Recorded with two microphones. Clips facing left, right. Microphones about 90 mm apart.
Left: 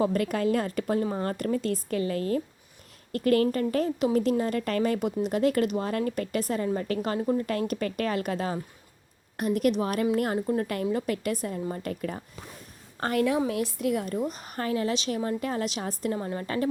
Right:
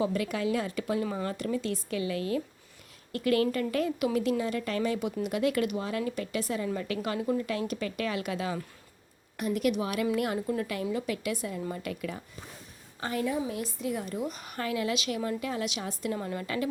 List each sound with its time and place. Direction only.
0.0 s a woman's voice: 50° left (ahead or behind)
10.9 s a woman's voice: 50° left (ahead or behind)
13.0 s a woman's voice: 60° left (ahead or behind)
14.3 s a woman's voice: 40° left (ahead or behind)